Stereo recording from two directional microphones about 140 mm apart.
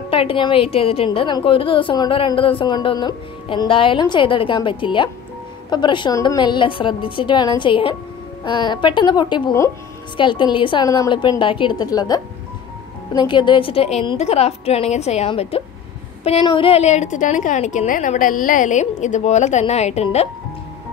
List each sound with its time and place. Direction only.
0.1 s a woman's voice: 40° left (ahead or behind)